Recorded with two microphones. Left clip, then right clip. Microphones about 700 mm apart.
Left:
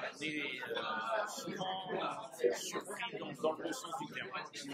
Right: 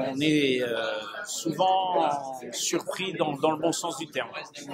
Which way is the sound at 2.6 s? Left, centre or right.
Right.